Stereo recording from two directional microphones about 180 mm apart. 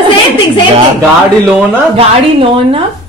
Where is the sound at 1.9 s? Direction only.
30° right (ahead or behind).